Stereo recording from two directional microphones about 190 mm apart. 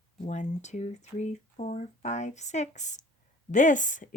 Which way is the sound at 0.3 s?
40° left (ahead or behind).